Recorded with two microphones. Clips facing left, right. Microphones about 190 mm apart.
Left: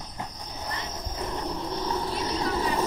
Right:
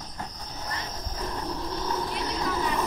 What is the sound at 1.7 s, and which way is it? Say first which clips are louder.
Vehicle: left 1 dB; 30° left (ahead or behind).